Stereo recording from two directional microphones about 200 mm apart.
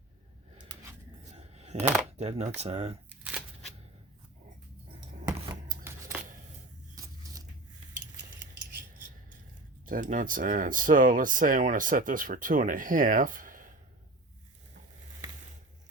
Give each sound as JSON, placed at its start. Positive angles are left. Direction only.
{"t": 0.6, "sound": "a sound", "side_deg": -15}
{"t": 1.3, "sound": "coin", "side_deg": -35}
{"t": 2.6, "sound": "speech", "side_deg": -30}
{"t": 3.1, "sound": "shuffling cards", "side_deg": -5}
{"t": 5.8, "sound": "scissors", "side_deg": -10}
{"t": 8.7, "sound": "a sound", "side_deg": -40}
{"t": 9.8, "sound": "speech", "side_deg": -40}